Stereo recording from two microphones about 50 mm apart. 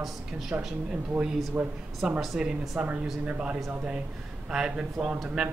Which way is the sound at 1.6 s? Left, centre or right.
Right.